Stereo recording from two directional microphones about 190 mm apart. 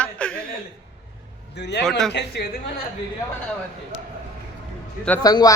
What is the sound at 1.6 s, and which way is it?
Speech, 65° left (ahead or behind).